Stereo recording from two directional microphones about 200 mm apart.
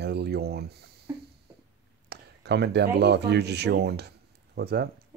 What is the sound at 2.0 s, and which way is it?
Speech, 55° right (ahead or behind).